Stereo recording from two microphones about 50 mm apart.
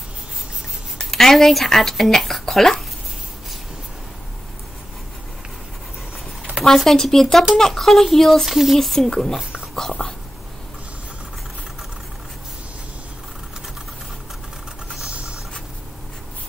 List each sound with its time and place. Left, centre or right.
0.9 s speech: centre
6.6 s speech: centre
8.5 s speech: centre
8.7 s speech: centre
10.0 s whispering: left